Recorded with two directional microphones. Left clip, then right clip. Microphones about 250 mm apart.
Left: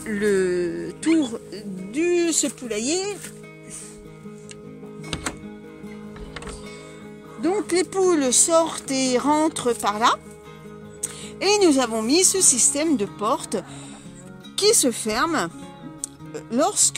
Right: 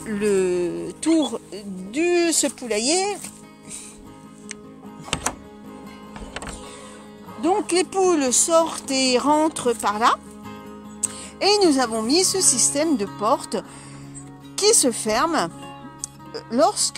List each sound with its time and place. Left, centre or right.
0.0 s music: centre
1.2 s speech: centre
7.4 s speech: centre